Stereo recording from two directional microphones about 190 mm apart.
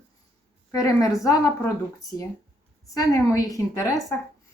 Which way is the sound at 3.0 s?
15° left (ahead or behind).